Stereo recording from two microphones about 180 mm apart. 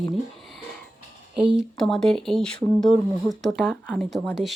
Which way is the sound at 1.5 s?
Centre (ahead or behind).